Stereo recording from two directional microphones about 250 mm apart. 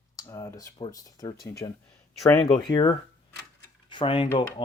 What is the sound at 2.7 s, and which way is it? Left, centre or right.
Speech, centre.